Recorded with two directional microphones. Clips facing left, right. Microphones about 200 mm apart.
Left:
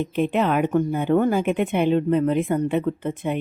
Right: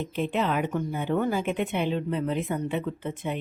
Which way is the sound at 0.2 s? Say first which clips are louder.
Left 6 dB; 60° left (ahead or behind).